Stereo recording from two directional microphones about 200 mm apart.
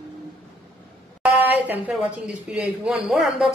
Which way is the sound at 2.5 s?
5° right (ahead or behind).